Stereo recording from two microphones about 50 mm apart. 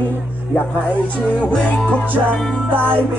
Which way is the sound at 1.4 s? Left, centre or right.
Left.